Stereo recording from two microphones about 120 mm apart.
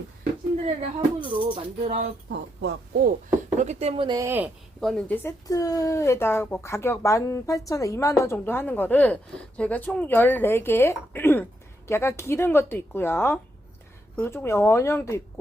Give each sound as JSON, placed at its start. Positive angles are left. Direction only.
{"t": 0.6, "sound": "speech", "side_deg": -50}
{"t": 3.6, "sound": "speech", "side_deg": -65}
{"t": 4.0, "sound": "speech", "side_deg": -35}
{"t": 4.3, "sound": "speech", "side_deg": -15}
{"t": 4.8, "sound": "speech", "side_deg": 5}
{"t": 5.5, "sound": "speech", "side_deg": 30}